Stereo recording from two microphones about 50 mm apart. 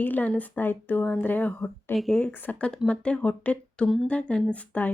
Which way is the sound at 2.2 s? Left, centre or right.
Left.